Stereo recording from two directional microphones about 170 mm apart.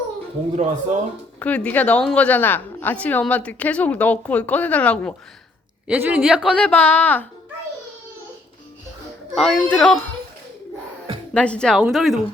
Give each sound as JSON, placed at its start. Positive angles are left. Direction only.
{"t": 0.5, "sound": "speech", "side_deg": -45}
{"t": 1.4, "sound": "a woman's voice", "side_deg": 10}
{"t": 5.9, "sound": "a woman's voice", "side_deg": -10}
{"t": 6.6, "sound": "a woman's voice", "side_deg": 10}
{"t": 9.3, "sound": "speech", "side_deg": 0}
{"t": 11.3, "sound": "a woman's voice", "side_deg": 5}